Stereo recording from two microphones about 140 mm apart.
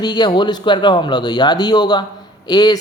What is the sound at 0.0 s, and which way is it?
A woman's voice, 30° left (ahead or behind).